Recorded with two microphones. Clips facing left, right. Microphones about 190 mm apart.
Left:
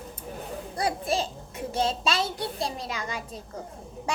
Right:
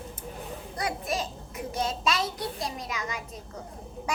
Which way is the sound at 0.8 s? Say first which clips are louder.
Left 4 dB; 30° left (ahead or behind).